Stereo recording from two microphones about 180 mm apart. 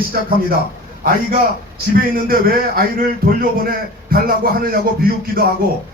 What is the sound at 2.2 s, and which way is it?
A man's voice, 55° right (ahead or behind).